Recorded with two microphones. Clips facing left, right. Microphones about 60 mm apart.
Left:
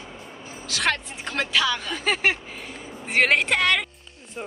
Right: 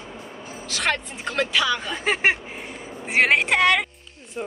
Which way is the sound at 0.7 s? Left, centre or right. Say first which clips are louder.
Even; centre.